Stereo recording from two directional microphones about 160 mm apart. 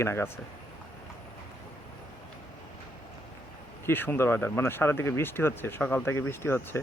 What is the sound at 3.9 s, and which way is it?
A man's voice, 15° left (ahead or behind).